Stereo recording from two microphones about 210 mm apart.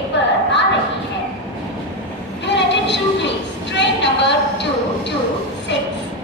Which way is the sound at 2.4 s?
55° left (ahead or behind).